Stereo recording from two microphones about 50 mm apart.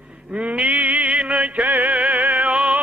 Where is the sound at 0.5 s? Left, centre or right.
Right.